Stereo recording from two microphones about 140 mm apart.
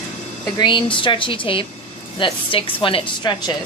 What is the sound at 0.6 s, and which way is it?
Speech, 35° left (ahead or behind).